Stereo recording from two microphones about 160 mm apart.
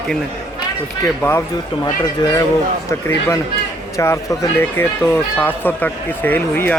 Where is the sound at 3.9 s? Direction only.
20° left (ahead or behind).